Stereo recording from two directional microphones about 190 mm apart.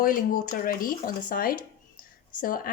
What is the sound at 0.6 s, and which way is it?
Speech, 50° left (ahead or behind).